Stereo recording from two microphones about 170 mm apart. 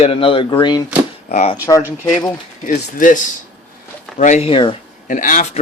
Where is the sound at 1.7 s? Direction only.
20° left (ahead or behind).